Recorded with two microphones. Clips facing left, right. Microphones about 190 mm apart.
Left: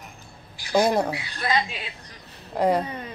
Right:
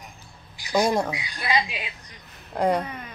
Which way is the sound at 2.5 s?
Centre (ahead or behind).